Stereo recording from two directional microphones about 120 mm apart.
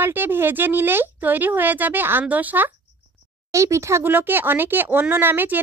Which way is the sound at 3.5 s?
25° right (ahead or behind).